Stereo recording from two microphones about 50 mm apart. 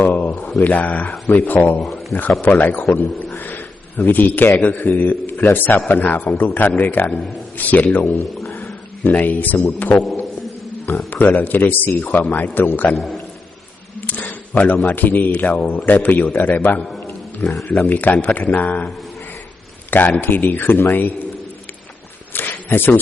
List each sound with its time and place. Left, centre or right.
0.0 s speech: left
1.8 s a sound: centre
2.4 s speech: left
9.0 s speech: left
11.1 s speech: left
12.9 s a man's voice: centre
14.1 s a sound: left
14.8 s speech: left
19.9 s speech: left
22.3 s a sound: left